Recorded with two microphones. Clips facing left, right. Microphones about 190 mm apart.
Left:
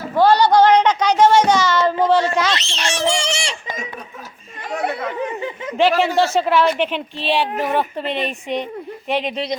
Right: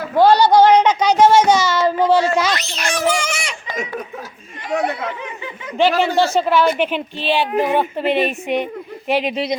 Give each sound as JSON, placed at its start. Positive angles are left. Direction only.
{"t": 0.2, "sound": "a sound", "side_deg": -10}
{"t": 2.0, "sound": "a man's voice", "side_deg": -5}
{"t": 2.5, "sound": "a child's voice", "side_deg": 25}
{"t": 5.7, "sound": "speech", "side_deg": 0}